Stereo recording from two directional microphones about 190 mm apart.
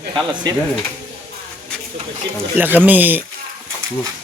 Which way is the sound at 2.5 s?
10° right (ahead or behind).